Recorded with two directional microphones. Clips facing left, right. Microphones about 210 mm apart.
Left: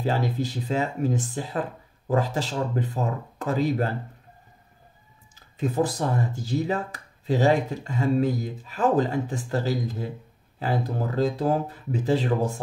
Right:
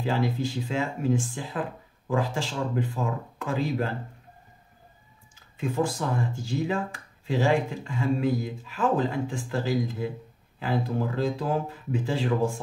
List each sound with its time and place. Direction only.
0.0 s speech: 40° left (ahead or behind)
5.3 s speech: 40° left (ahead or behind)